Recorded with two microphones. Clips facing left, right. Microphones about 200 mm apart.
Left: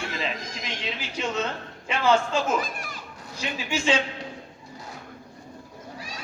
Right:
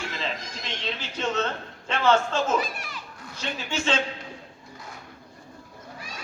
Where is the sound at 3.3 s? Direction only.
10° left (ahead or behind).